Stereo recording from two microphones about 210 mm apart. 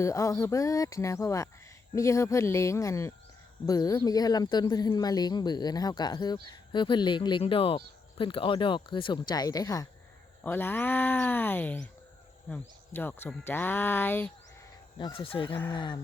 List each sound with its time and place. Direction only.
0.0 s speech: 15° left (ahead or behind)
14.9 s speech: 25° left (ahead or behind)